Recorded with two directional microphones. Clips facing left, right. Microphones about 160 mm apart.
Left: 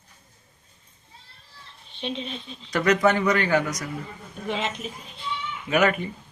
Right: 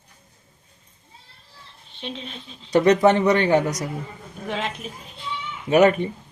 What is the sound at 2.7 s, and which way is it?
Speech, 30° right (ahead or behind).